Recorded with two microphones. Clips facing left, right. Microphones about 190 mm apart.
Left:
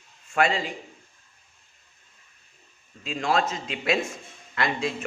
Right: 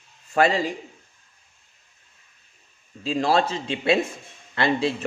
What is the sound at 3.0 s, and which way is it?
Speech, 35° right (ahead or behind).